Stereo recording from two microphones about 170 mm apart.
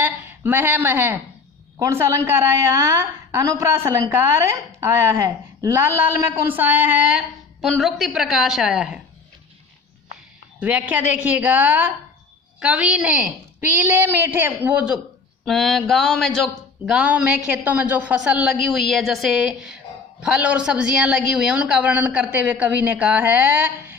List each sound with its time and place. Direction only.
0.0 s speech: 10° right (ahead or behind)
10.6 s speech: 10° right (ahead or behind)